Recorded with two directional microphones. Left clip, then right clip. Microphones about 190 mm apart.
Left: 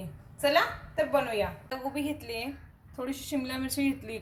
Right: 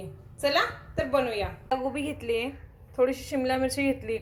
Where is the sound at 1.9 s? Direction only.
5° right (ahead or behind).